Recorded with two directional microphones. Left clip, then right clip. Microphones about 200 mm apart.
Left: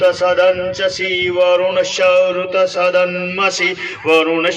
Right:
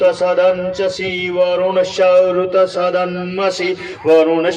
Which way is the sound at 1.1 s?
55° right (ahead or behind).